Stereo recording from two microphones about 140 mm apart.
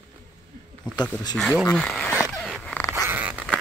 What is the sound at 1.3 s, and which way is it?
Speech, centre (ahead or behind).